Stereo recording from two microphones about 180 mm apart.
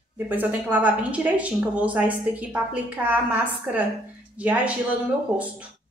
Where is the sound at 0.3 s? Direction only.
10° right (ahead or behind).